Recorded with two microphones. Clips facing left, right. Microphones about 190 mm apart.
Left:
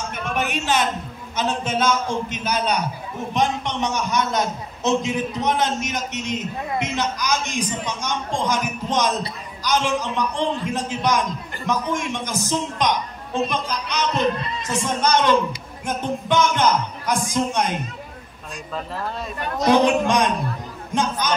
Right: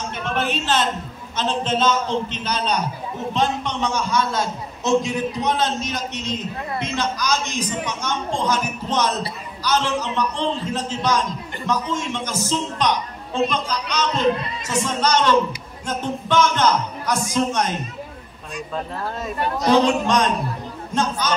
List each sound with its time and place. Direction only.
0.2 s a sound: 10° left (ahead or behind)
1.3 s a man's voice: 10° left (ahead or behind)
19.6 s a man's voice: 15° left (ahead or behind)